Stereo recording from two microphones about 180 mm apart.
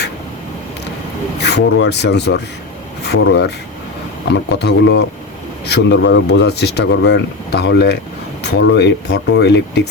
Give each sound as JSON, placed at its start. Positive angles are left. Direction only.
{"t": 1.4, "sound": "speech", "side_deg": 70}